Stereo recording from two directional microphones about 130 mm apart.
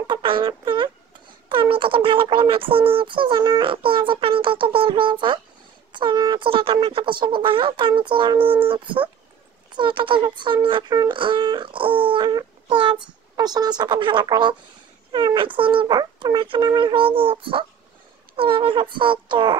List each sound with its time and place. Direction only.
0.0 s a child's voice: 40° right (ahead or behind)